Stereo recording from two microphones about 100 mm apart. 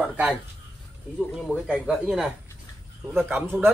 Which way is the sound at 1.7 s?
5° right (ahead or behind).